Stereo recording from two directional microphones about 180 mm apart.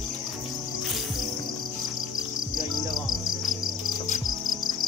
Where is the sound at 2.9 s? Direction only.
Centre (ahead or behind).